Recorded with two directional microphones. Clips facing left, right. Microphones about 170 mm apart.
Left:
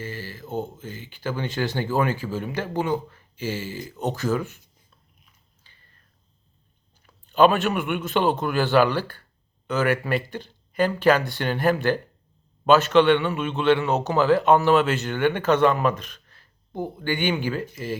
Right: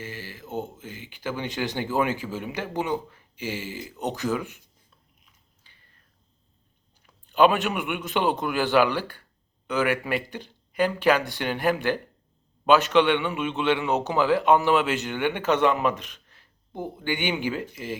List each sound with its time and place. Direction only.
0.0 s speech: 15° right (ahead or behind)
7.5 s speech: 15° right (ahead or behind)